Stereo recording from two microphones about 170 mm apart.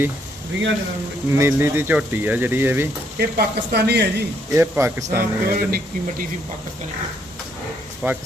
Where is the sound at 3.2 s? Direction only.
70° right (ahead or behind).